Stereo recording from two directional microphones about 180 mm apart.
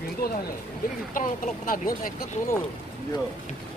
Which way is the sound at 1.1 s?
50° left (ahead or behind).